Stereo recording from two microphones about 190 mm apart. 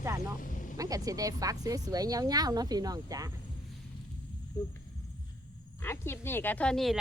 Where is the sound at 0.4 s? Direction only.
45° left (ahead or behind).